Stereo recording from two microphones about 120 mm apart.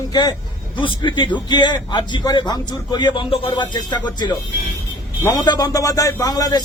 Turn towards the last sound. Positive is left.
turn(degrees=30)  # may be behind; listen again after turning